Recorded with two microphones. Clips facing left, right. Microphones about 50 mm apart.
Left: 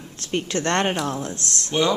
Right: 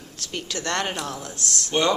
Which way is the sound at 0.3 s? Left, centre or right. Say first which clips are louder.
Left 5 dB; left.